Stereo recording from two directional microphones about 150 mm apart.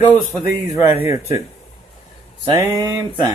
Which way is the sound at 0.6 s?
20° right (ahead or behind).